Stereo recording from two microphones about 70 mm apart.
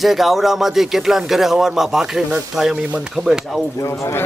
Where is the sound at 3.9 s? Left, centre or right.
Left.